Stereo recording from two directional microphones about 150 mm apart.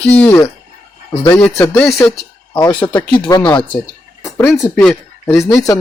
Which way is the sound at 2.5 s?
25° left (ahead or behind).